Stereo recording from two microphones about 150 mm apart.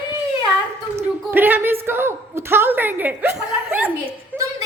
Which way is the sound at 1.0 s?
15° right (ahead or behind).